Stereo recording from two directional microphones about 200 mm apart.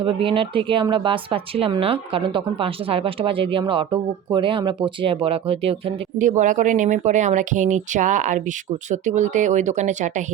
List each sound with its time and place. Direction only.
0.0 s speech: 25° right (ahead or behind)